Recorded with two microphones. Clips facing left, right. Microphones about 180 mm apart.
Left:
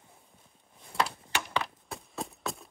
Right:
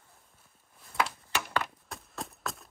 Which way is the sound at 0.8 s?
25° left (ahead or behind).